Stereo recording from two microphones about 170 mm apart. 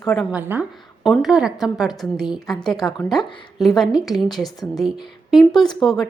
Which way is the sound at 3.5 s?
Centre (ahead or behind).